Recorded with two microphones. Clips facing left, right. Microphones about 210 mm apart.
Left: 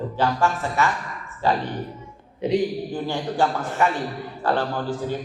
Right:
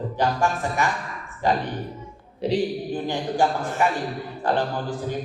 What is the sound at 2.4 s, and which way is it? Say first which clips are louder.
Speech: left 2 dB; 35° right (ahead or behind).